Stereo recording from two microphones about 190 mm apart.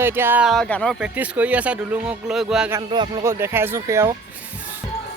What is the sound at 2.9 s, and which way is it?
A man's voice, 20° right (ahead or behind).